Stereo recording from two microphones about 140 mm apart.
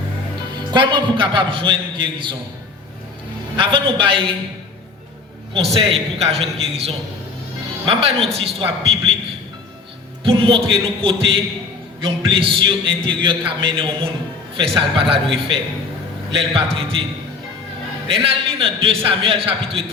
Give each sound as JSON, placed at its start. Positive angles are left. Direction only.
{"t": 0.5, "sound": "a man's voice", "side_deg": -35}
{"t": 3.6, "sound": "a man's voice", "side_deg": -40}
{"t": 5.7, "sound": "a man's voice", "side_deg": -45}
{"t": 10.2, "sound": "a man's voice", "side_deg": -40}
{"t": 18.1, "sound": "a man's voice", "side_deg": -40}